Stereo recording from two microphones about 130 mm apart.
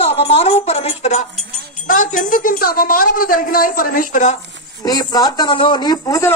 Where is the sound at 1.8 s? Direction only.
90° left.